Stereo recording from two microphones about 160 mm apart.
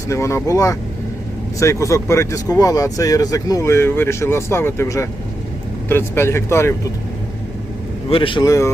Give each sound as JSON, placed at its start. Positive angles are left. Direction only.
{"t": 0.1, "sound": "speech", "side_deg": 15}
{"t": 8.1, "sound": "speech", "side_deg": 30}